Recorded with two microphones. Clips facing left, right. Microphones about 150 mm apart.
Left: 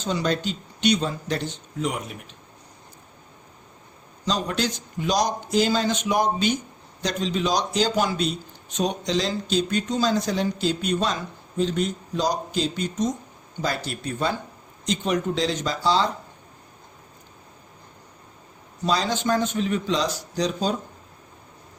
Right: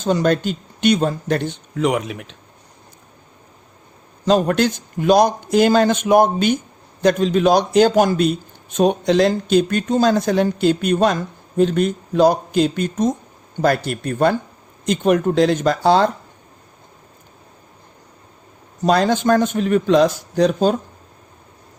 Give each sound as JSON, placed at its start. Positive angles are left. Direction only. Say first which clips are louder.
{"t": 0.0, "sound": "a man's voice", "louder": "right 8 dB", "side_deg": -50}
{"t": 4.3, "sound": "a man's voice", "louder": "right 10 dB", "side_deg": -55}
{"t": 18.8, "sound": "a man's voice", "louder": "right 8 dB", "side_deg": -55}